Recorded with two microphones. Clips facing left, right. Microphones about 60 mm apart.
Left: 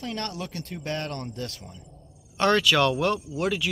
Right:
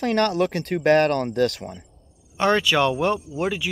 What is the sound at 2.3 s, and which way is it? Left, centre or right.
Speech, centre.